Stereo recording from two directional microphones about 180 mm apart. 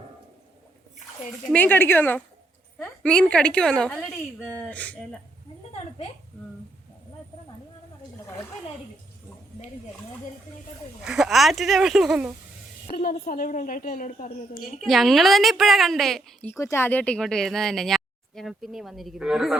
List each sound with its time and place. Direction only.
1.5 s a woman's voice: 10° left (ahead or behind)
11.0 s a woman's voice: centre (ahead or behind)
13.2 s a woman's voice: 50° left (ahead or behind)
14.8 s a woman's voice: centre (ahead or behind)